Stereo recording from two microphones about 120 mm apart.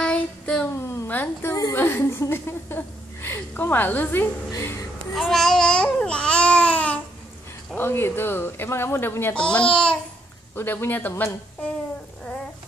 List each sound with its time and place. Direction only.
0.0 s child singing: 5° left (ahead or behind)
0.7 s a sound: 20° left (ahead or behind)
4.5 s speech: 25° left (ahead or behind)
5.1 s babbling: centre (ahead or behind)
7.7 s speech: 20° left (ahead or behind)
9.3 s speech: 10° left (ahead or behind)